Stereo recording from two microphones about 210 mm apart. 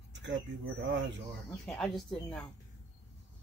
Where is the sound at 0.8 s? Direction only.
60° right (ahead or behind).